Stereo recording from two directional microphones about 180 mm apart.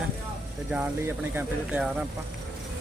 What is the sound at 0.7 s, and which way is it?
Speech, 10° right (ahead or behind).